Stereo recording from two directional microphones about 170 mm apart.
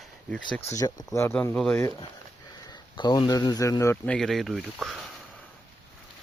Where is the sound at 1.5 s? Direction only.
5° left (ahead or behind).